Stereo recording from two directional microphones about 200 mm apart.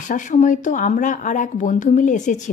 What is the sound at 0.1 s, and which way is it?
Speech, 40° left (ahead or behind).